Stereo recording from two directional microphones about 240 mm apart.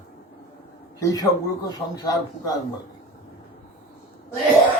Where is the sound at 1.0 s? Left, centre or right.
Centre.